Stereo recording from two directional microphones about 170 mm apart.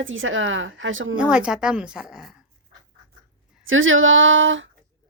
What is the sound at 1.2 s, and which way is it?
Speech, 5° right (ahead or behind).